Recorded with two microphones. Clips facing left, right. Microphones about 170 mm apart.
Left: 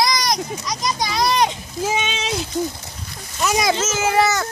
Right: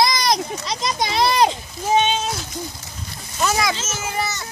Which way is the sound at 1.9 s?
90° left.